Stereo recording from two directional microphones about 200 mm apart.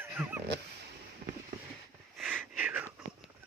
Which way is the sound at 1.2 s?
55° right (ahead or behind).